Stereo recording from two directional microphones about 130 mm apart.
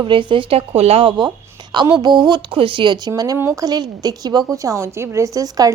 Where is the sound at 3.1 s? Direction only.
25° right (ahead or behind).